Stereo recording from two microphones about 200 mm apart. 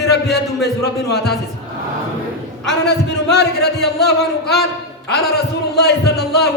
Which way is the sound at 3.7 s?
55° left (ahead or behind).